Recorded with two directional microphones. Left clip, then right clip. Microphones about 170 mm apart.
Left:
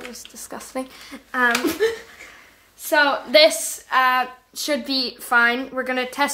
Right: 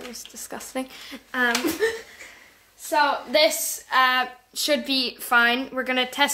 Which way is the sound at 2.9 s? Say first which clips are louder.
Left 3 dB; 30° left (ahead or behind).